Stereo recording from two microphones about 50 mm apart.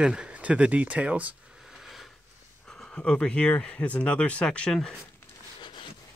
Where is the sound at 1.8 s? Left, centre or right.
Centre.